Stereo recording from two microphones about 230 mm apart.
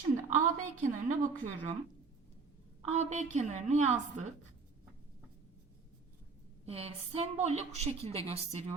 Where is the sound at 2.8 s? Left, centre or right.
Right.